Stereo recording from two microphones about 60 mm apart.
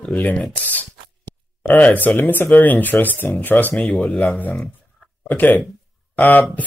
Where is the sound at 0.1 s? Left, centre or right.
Left.